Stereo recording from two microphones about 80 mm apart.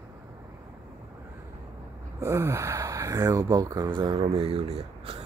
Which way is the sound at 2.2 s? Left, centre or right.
Right.